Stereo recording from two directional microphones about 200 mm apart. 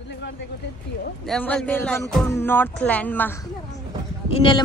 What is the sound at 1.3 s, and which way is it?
Speech, 5° left (ahead or behind).